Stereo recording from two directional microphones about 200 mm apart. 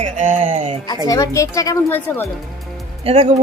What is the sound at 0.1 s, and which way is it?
Speech, 40° right (ahead or behind).